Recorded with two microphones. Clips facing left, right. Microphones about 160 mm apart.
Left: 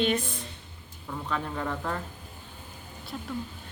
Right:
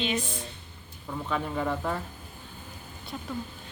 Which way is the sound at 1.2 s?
5° right (ahead or behind).